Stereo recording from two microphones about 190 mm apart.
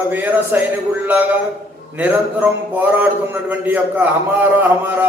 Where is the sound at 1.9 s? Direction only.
10° right (ahead or behind).